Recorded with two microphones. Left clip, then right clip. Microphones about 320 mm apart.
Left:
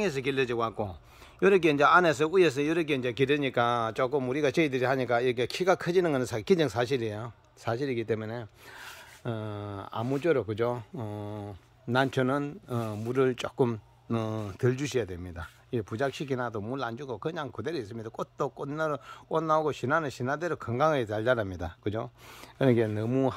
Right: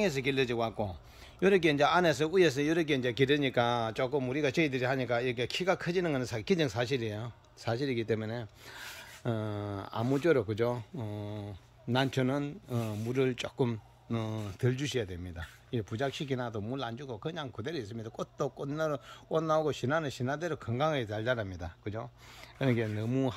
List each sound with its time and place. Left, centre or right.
0.0 s speech: centre